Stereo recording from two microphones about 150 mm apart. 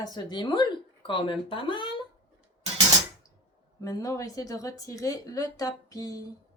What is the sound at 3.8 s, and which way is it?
Speech, 25° left (ahead or behind).